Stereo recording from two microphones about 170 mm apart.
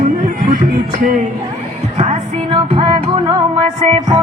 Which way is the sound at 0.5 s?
55° right (ahead or behind).